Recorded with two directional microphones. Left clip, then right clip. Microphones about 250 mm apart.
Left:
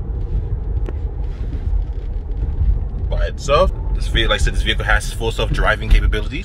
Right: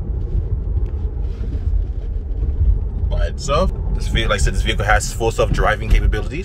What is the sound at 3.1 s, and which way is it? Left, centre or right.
Vehicle, centre.